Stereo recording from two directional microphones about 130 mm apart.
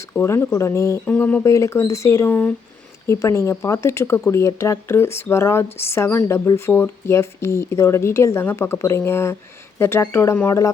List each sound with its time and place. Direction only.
0.1 s speech: 15° left (ahead or behind)
1.0 s speech: 10° left (ahead or behind)
1.5 s speech: 25° left (ahead or behind)